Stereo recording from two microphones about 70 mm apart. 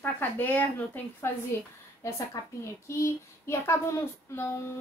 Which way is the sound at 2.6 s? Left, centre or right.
Left.